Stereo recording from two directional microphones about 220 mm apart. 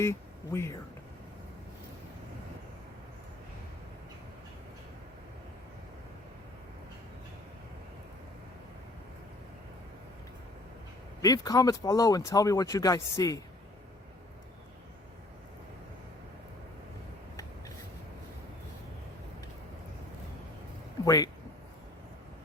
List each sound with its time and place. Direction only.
0.0 s speech: 10° left (ahead or behind)
11.2 s speech: 15° left (ahead or behind)
21.0 s speech: 15° left (ahead or behind)